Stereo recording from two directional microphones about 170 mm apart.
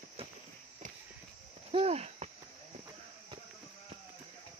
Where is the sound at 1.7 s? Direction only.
35° right (ahead or behind).